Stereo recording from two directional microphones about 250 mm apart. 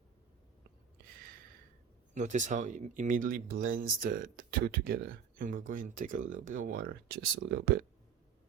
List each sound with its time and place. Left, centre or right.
2.1 s speech: right